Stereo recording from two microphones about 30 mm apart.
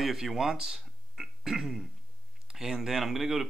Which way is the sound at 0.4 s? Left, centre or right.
Centre.